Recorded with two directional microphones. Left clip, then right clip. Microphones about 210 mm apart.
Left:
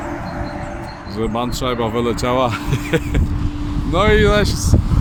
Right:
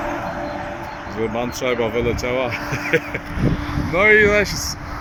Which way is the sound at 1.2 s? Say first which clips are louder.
Left 1 dB; 15° left (ahead or behind).